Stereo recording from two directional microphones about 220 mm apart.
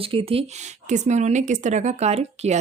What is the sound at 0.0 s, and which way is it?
Speech, 25° right (ahead or behind).